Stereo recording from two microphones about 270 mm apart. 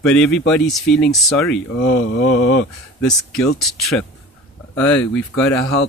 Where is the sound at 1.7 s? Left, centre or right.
Left.